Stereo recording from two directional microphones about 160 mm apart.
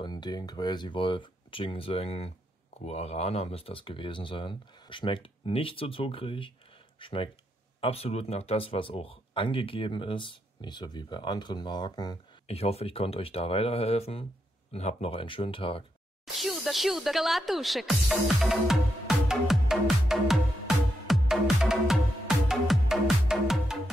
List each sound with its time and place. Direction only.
0.0 s speech: 25° left (ahead or behind)
12.4 s speech: 40° left (ahead or behind)
16.3 s speech: centre (ahead or behind)
22.5 s music: centre (ahead or behind)